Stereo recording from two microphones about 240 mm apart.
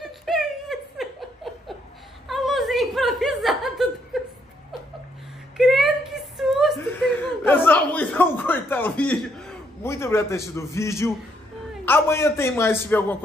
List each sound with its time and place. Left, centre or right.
0.0 s giggle: centre
2.2 s chuckle: centre
5.6 s a sound: centre
11.8 s a man's voice: centre